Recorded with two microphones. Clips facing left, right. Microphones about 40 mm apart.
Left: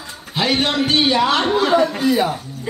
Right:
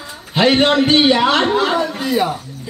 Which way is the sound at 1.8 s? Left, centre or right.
Centre.